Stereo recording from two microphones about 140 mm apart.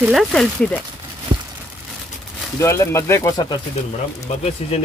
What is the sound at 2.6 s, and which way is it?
Speech, 20° left (ahead or behind).